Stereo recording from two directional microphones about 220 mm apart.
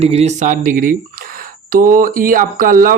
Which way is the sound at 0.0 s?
30° right (ahead or behind).